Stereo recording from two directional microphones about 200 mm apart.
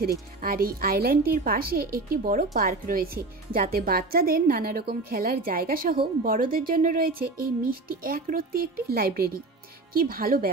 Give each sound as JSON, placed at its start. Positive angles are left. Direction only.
{"t": 0.0, "sound": "speech", "side_deg": -50}